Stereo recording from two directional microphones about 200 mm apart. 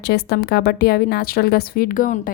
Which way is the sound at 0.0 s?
55° left (ahead or behind).